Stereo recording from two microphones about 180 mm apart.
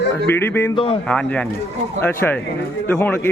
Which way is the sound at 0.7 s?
30° left (ahead or behind).